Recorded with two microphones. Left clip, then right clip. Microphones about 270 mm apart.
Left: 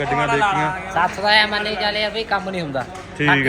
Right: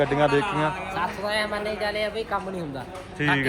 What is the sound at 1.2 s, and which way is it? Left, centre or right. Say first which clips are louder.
A woman's voice: left 12 dB; left.